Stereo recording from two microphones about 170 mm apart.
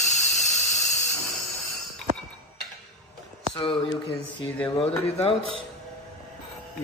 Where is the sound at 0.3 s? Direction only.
Centre (ahead or behind).